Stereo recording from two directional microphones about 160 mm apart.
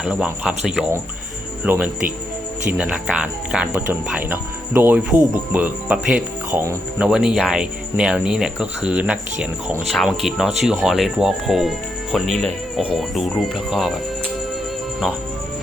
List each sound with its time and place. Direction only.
0.0 s speech: 5° right (ahead or behind)
6.5 s speech: 15° right (ahead or behind)
7.1 s speech: 5° right (ahead or behind)
12.4 s music: 5° left (ahead or behind)
12.8 s speech: 5° right (ahead or behind)